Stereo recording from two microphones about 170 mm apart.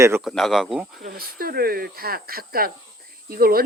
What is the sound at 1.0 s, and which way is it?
Speech, 60° right (ahead or behind).